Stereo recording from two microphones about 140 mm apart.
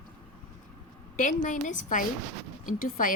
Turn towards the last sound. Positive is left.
turn(degrees=75)  # may be behind; listen again after turning